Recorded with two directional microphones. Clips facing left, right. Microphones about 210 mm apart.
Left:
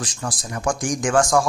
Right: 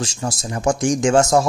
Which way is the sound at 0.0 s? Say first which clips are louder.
Right 4 dB; 25° right (ahead or behind).